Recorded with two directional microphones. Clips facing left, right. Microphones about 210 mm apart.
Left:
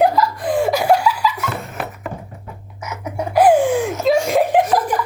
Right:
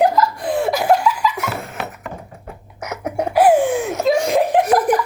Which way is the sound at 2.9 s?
55° right (ahead or behind).